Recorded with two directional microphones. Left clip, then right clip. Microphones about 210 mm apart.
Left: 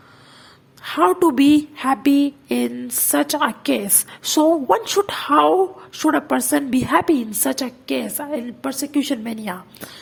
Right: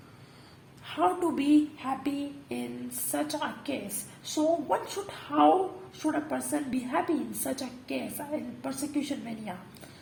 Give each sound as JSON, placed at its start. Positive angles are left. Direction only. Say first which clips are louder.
{"t": 0.9, "sound": "a woman's voice", "louder": "left 11 dB", "side_deg": 45}